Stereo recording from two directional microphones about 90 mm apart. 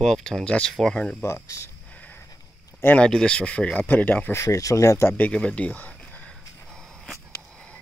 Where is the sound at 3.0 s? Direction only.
10° left (ahead or behind).